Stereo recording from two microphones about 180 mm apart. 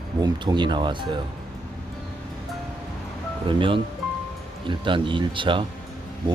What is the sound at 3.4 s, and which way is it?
Speech, 30° right (ahead or behind).